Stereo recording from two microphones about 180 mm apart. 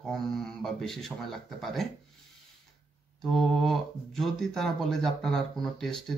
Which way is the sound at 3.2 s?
Centre (ahead or behind).